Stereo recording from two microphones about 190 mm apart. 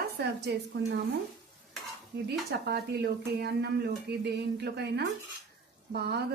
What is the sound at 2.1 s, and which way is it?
A woman's voice, 60° right (ahead or behind).